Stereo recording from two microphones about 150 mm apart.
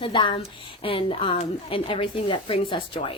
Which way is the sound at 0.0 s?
35° left (ahead or behind).